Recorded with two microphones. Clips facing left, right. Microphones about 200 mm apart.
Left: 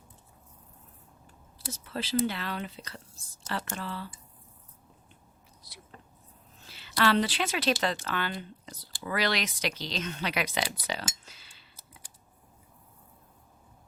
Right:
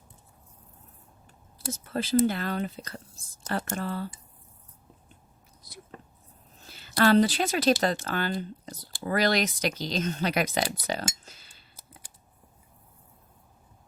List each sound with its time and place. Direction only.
1.5 s speech: 50° right (ahead or behind)
6.6 s speech: 45° right (ahead or behind)